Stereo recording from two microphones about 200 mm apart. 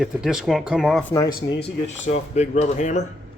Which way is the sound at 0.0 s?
Centre (ahead or behind).